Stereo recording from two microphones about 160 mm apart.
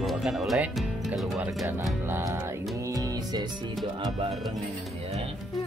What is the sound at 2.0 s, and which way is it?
Music, 15° right (ahead or behind).